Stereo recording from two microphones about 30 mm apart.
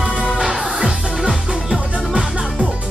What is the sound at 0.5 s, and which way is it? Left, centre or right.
Music, centre.